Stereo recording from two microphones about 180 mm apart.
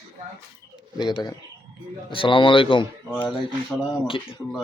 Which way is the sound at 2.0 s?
30° left (ahead or behind).